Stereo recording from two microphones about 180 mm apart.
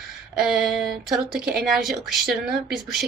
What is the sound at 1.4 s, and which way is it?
Speech, 55° right (ahead or behind).